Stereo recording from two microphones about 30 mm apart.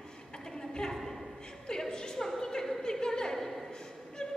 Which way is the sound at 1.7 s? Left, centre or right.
Left.